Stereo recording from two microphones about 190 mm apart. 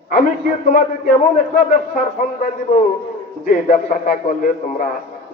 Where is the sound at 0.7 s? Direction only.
45° left (ahead or behind).